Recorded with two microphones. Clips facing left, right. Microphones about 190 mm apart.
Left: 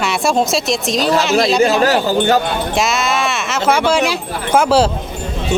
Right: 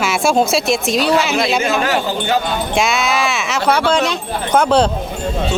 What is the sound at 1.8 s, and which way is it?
Speech, 40° left (ahead or behind).